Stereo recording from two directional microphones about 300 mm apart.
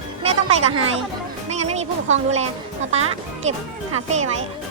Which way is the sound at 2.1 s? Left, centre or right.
Right.